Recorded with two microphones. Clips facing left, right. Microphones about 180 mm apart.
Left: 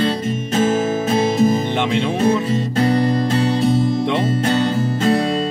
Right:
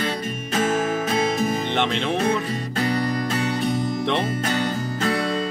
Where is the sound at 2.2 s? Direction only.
25° left (ahead or behind).